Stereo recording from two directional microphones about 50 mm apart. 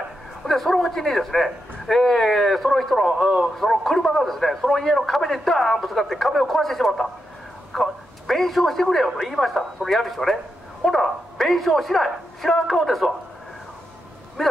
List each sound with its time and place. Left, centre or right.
0.5 s a man's voice: centre
3.1 s a man's voice: centre
3.5 s a man's voice: centre
14.4 s a man's voice: centre